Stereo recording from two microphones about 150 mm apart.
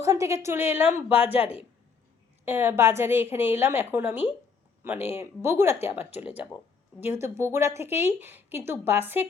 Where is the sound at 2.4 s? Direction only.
15° right (ahead or behind).